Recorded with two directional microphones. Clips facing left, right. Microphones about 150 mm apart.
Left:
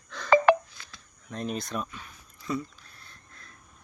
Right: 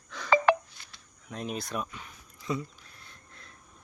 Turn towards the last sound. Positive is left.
turn(degrees=-20)  # may be behind; listen again after turning